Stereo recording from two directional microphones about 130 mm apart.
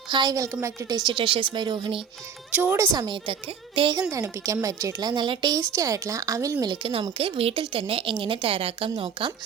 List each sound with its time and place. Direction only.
0.1 s a woman's voice: 35° right (ahead or behind)
2.5 s speech: 15° right (ahead or behind)
3.8 s a woman's voice: 35° right (ahead or behind)
4.1 s a woman's voice: 25° right (ahead or behind); by 9.3 s 40° right (ahead or behind)